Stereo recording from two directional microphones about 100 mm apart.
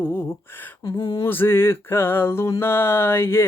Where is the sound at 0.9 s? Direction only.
50° left (ahead or behind).